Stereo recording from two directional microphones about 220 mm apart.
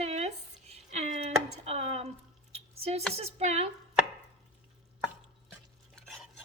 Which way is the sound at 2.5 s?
30° right (ahead or behind).